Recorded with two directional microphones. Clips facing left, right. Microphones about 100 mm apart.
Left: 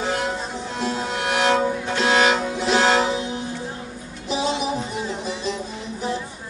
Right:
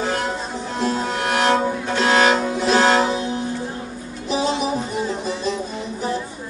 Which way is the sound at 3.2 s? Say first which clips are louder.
Right 3 dB; 40° right (ahead or behind).